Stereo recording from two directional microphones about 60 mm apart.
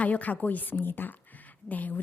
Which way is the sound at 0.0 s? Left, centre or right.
Left.